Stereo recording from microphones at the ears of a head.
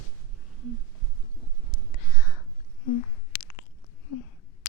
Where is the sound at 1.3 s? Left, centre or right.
Right.